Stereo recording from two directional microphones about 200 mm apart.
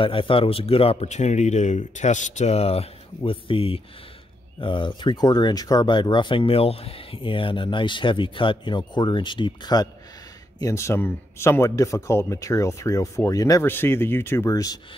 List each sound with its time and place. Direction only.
0.0 s speech: 25° left (ahead or behind)